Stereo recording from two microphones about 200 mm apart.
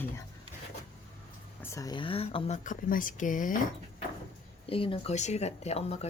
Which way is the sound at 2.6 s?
40° left (ahead or behind).